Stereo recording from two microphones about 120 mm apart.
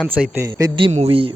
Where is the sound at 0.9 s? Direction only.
55° right (ahead or behind).